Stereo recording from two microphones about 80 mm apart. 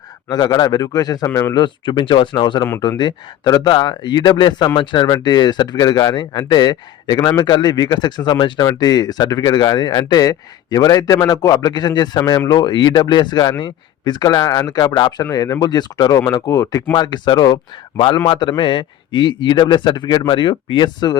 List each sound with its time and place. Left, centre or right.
0.3 s speech: left
1.3 s speech: left
1.5 s a man's voice: left
5.1 s speech: left
8.6 s speech: left
14.4 s speech: left
14.7 s speech: left
15.2 s speech: left
15.6 s speech: left
16.5 s speech: left
16.9 s a man's voice: left